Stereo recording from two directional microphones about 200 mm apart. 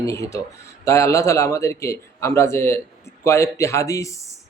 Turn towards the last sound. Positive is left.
turn(degrees=15)  # may be behind; listen again after turning